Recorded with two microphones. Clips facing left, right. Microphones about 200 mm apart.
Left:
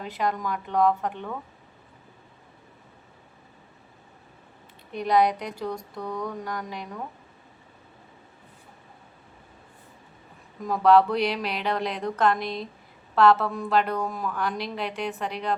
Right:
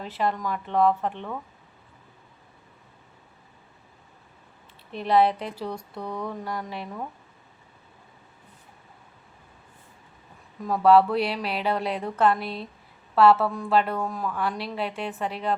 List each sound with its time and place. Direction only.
0.0 s a woman's voice: centre (ahead or behind)
5.0 s a woman's voice: 5° right (ahead or behind)
5.3 s speech: 30° right (ahead or behind)
5.5 s a sound: 5° right (ahead or behind)
10.7 s a sound: 5° right (ahead or behind)
13.1 s a woman's voice: 5° right (ahead or behind)